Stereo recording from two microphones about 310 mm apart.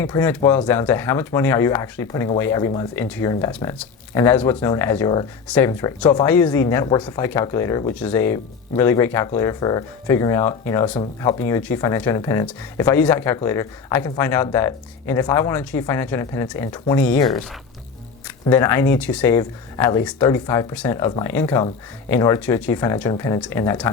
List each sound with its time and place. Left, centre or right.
0.0 s speech: centre
18.4 s speech: centre